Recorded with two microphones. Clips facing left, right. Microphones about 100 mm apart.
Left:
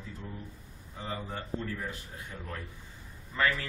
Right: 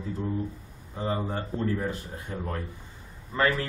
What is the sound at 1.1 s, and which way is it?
Speech, 40° right (ahead or behind).